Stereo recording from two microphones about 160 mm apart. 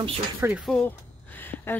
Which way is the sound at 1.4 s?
10° left (ahead or behind).